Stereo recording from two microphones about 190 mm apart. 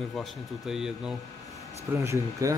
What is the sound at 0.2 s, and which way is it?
Speech, centre (ahead or behind).